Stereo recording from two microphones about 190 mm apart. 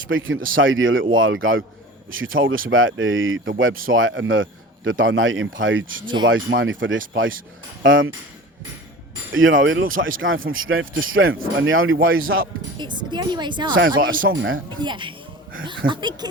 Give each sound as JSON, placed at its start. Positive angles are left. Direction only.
{"t": 0.1, "sound": "speech", "side_deg": -90}
{"t": 9.3, "sound": "speech", "side_deg": -90}
{"t": 12.8, "sound": "a woman's voice", "side_deg": -25}
{"t": 14.4, "sound": "speech", "side_deg": -90}
{"t": 14.8, "sound": "a woman's voice", "side_deg": -25}